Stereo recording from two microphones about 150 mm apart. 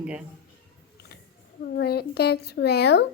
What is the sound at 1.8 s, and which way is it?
Speech, 90° left.